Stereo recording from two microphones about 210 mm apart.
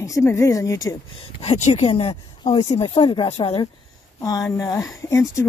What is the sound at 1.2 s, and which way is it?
Speech, 30° left (ahead or behind).